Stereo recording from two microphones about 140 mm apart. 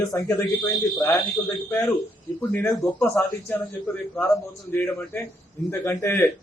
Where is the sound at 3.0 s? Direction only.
15° left (ahead or behind).